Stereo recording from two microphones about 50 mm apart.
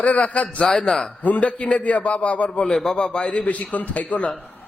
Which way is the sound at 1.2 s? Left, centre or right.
Left.